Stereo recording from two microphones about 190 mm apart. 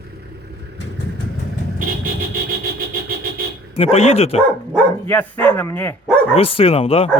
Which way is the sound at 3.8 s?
35° left (ahead or behind).